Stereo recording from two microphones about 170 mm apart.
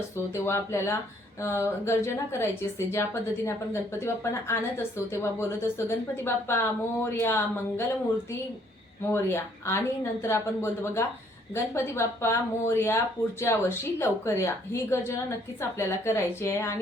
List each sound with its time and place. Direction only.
0.4 s a woman's voice: 15° left (ahead or behind)
9.0 s a woman's voice: 15° left (ahead or behind)